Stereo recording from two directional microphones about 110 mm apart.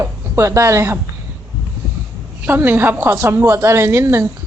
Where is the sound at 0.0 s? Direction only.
25° right (ahead or behind).